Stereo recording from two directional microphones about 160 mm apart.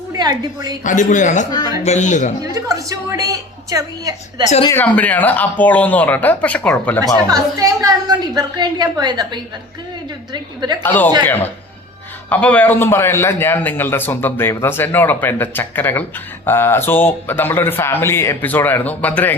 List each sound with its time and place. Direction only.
0.1 s a woman's voice: 25° right (ahead or behind)
0.9 s a man's voice: 50° left (ahead or behind)
2.4 s a woman's voice: 20° right (ahead or behind)
4.7 s a man's voice: 10° left (ahead or behind)
7.3 s a woman's voice: 20° right (ahead or behind)
10.8 s a man's voice: 10° left (ahead or behind)
12.3 s a man's voice: 10° left (ahead or behind)